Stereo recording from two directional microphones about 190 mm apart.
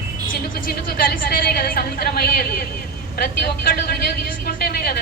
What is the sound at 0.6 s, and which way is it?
A woman's voice, 50° left (ahead or behind).